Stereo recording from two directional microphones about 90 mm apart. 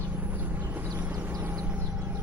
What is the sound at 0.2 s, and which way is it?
Vehicle, 20° right (ahead or behind).